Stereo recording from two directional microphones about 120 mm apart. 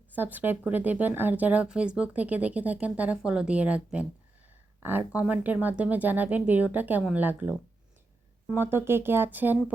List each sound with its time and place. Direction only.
0.2 s speech: 15° right (ahead or behind)
8.5 s speech: 20° right (ahead or behind)